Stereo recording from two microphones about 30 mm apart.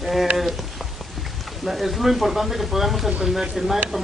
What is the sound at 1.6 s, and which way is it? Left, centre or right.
Speech, centre.